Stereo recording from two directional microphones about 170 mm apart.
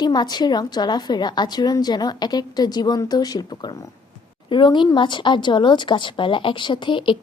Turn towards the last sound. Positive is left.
turn(degrees=30)  # may be behind; listen again after turning